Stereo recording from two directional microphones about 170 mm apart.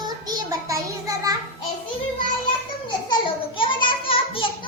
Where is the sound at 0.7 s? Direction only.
20° right (ahead or behind).